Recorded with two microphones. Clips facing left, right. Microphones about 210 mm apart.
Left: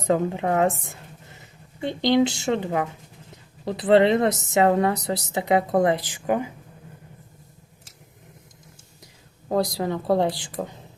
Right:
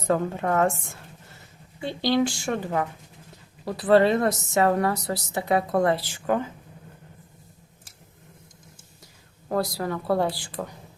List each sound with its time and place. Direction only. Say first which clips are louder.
0.0 s a woman's voice: left 2 dB; 15° left (ahead or behind)
9.5 s a woman's voice: left 3 dB; 20° left (ahead or behind)